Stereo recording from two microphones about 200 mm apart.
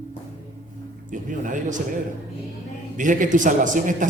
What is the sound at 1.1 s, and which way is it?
Speech, 40° right (ahead or behind).